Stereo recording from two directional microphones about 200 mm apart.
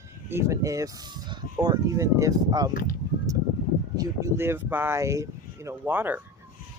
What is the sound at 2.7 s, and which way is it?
Speech, 45° left (ahead or behind).